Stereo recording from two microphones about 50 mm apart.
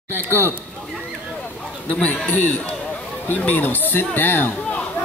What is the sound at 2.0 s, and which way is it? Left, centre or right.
Speech, left.